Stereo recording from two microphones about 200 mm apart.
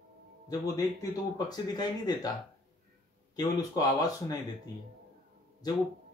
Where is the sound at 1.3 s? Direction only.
20° left (ahead or behind).